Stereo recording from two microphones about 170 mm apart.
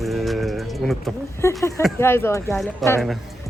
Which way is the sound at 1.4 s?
15° left (ahead or behind).